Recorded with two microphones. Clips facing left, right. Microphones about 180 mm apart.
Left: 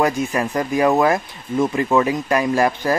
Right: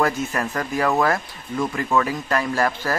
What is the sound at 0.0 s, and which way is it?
Speech, 15° left (ahead or behind).